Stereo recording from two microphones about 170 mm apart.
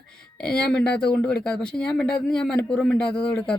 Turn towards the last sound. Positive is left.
turn(degrees=5)  # may be behind; listen again after turning